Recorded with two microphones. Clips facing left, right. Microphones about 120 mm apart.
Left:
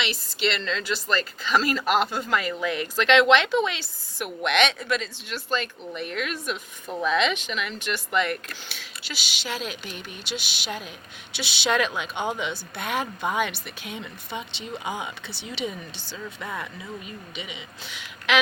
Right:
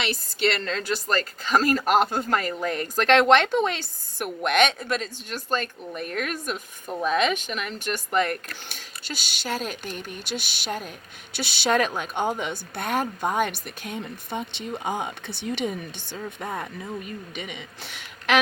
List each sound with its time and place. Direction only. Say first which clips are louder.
0.0 s speech: right 2 dB; 50° right (ahead or behind)